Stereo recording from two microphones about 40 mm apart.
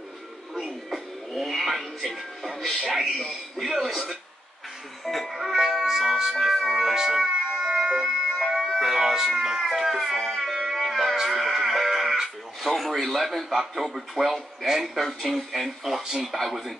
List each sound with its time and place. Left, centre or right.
0.6 s music: centre
1.3 s a man's voice: centre
7.6 s emergency vehicle: centre
8.5 s a sound: centre
9.4 s a man's voice: centre
10.1 s music: centre
13.0 s a man's voice: centre